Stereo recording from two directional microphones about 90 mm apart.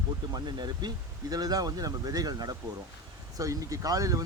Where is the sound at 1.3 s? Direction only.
45° right (ahead or behind).